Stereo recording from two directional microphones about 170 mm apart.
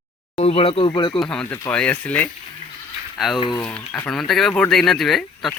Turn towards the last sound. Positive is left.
turn(degrees=0)  # may be behind; listen again after turning